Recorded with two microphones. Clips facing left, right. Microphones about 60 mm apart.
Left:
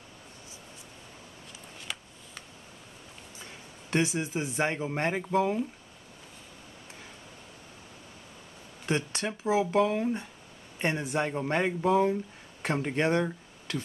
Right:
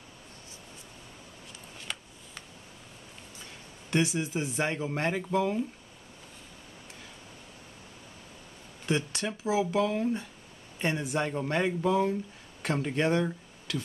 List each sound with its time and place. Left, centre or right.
1.9 s a sound: centre
3.9 s speech: left
8.8 s speech: left; by 13.3 s centre